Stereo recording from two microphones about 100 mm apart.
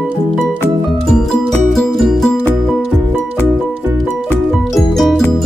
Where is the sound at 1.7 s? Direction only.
Centre (ahead or behind).